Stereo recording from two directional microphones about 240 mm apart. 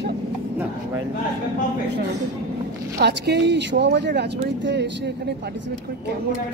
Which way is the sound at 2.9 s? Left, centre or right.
Right.